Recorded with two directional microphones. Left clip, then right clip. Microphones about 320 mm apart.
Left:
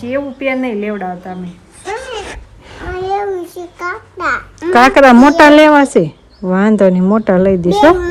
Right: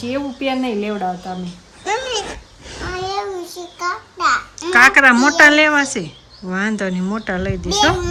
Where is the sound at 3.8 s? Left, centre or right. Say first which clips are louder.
Even; left.